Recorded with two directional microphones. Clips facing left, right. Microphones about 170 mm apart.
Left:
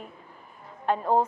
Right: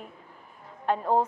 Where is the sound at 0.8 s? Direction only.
25° left (ahead or behind).